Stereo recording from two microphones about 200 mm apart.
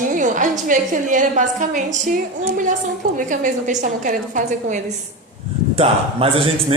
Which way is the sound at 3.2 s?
40° right (ahead or behind).